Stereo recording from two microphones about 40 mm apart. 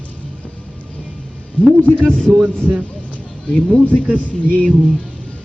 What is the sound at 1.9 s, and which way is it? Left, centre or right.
Speech, right.